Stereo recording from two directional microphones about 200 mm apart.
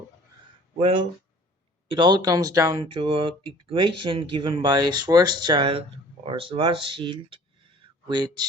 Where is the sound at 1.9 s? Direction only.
20° right (ahead or behind).